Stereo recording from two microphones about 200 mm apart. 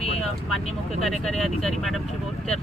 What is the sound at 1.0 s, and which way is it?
Speech, centre (ahead or behind).